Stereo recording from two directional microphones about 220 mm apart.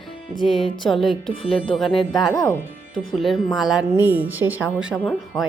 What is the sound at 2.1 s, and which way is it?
Speech, 20° left (ahead or behind).